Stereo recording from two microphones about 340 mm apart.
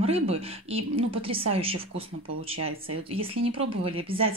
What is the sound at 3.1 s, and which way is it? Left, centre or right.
Speech, centre.